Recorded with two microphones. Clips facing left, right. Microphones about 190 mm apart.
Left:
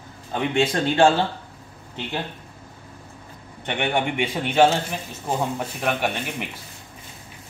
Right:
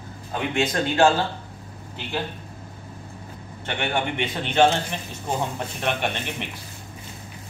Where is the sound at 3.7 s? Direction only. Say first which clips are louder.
Left 2 dB; 20° left (ahead or behind).